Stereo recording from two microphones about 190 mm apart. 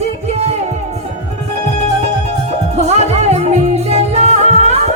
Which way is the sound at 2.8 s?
35° right (ahead or behind).